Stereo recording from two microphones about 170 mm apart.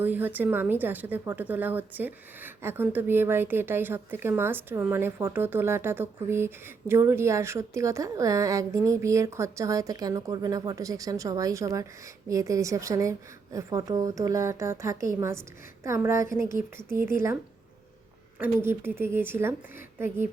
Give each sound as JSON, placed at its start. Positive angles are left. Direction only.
{"t": 0.0, "sound": "a woman's voice", "side_deg": -10}
{"t": 18.3, "sound": "a woman's voice", "side_deg": -10}